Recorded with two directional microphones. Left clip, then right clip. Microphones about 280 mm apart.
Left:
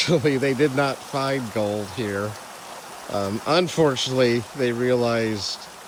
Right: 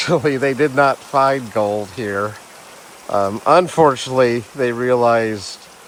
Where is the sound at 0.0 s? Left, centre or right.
Centre.